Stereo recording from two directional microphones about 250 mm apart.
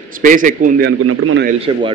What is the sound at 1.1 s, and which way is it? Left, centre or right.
Speech, right.